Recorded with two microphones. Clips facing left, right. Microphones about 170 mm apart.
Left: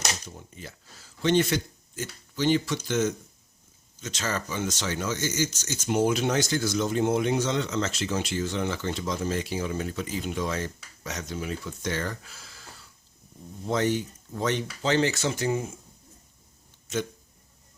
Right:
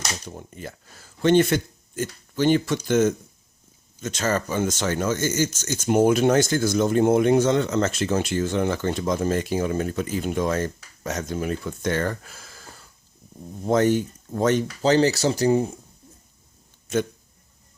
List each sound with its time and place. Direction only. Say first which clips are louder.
0.3 s speech: right 6 dB; 55° right (ahead or behind); by 15.7 s 35° right (ahead or behind)